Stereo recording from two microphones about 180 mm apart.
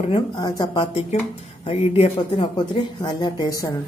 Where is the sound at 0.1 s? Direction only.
20° left (ahead or behind).